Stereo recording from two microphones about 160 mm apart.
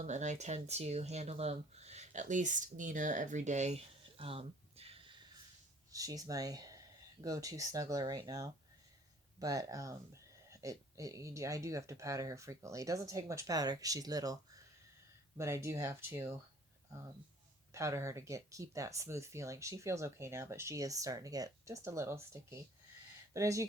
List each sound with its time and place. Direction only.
0.0 s speech: 45° right (ahead or behind)
5.9 s speech: 20° right (ahead or behind)
15.4 s speech: 15° right (ahead or behind)
17.7 s speech: 20° right (ahead or behind)